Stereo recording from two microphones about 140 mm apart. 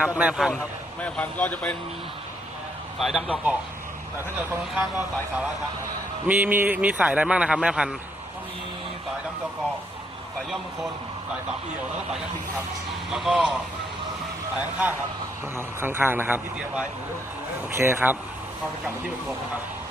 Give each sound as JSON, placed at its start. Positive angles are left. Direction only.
{"t": 0.0, "sound": "a man's voice", "side_deg": -10}
{"t": 1.0, "sound": "speech", "side_deg": 10}
{"t": 3.0, "sound": "speech", "side_deg": -5}
{"t": 4.7, "sound": "a man's voice", "side_deg": -5}
{"t": 6.2, "sound": "a man's voice", "side_deg": -15}
{"t": 13.1, "sound": "speech", "side_deg": -5}
{"t": 15.5, "sound": "a man's voice", "side_deg": -15}